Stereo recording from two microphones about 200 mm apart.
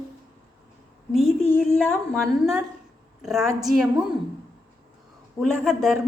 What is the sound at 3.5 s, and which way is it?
Speech, 15° right (ahead or behind).